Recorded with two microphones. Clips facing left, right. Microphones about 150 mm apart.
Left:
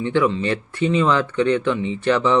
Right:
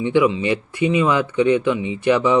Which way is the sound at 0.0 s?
15° right (ahead or behind).